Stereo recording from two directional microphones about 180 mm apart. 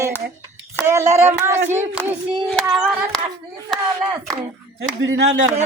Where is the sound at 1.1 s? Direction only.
40° right (ahead or behind).